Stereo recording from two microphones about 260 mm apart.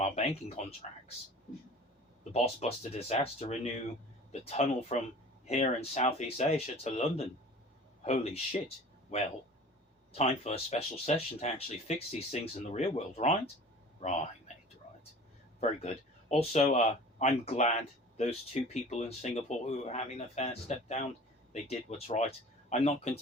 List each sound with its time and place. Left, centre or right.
0.0 s speech: left
2.3 s speech: left
15.8 s speech: left